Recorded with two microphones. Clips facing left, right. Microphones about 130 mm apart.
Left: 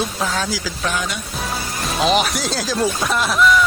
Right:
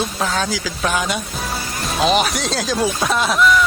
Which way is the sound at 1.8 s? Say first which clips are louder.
Right 1 dB; centre (ahead or behind).